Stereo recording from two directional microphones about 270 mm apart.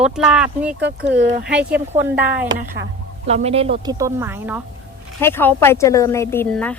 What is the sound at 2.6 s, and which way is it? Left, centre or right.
Speech, right.